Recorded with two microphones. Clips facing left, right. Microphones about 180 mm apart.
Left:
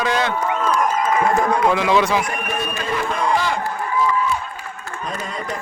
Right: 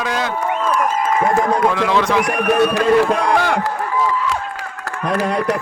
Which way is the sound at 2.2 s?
75° right (ahead or behind).